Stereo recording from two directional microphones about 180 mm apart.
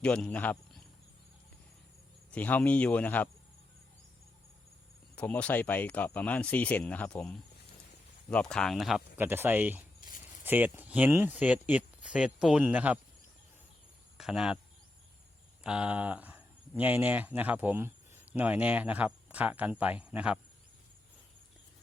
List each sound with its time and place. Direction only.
0.0 s speech: 5° left (ahead or behind)
2.3 s speech: 10° left (ahead or behind)
5.1 s speech: 10° left (ahead or behind)
9.1 s speech: 10° right (ahead or behind)
14.2 s speech: 5° right (ahead or behind)
15.6 s speech: 5° right (ahead or behind)